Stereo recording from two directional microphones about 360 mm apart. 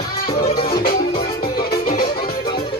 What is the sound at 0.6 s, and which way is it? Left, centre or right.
Music, centre.